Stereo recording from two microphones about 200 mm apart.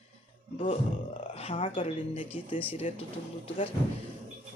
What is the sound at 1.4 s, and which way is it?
Speech, 25° left (ahead or behind).